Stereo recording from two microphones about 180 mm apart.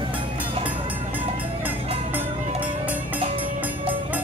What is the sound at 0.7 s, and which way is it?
Music, 10° right (ahead or behind).